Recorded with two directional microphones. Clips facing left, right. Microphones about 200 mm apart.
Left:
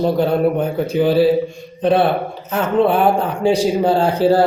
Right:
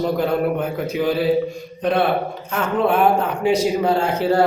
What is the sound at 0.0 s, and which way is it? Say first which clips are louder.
A man's voice: left 4 dB; 30° left (ahead or behind).